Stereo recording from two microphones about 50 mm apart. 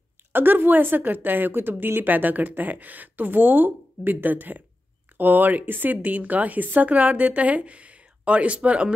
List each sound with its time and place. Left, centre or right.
0.3 s a woman's voice: right